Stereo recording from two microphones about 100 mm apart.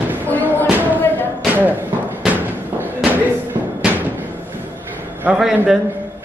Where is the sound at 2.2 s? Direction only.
15° right (ahead or behind).